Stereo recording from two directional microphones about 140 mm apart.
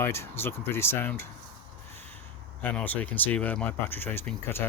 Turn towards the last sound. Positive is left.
turn(degrees=15)  # may be behind; listen again after turning